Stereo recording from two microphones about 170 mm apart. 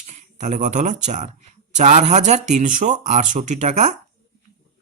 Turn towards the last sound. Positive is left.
turn(degrees=-45)  # may be behind; listen again after turning